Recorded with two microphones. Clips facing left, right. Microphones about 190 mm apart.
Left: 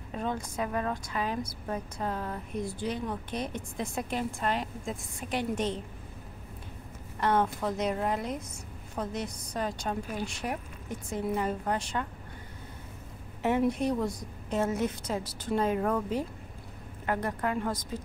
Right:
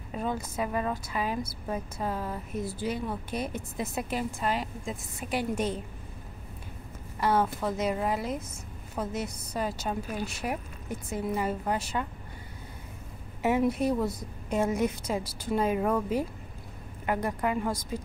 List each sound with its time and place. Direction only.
0.1 s a woman's voice: 5° right (ahead or behind)
7.2 s a woman's voice: 5° right (ahead or behind)
13.4 s a woman's voice: 5° right (ahead or behind)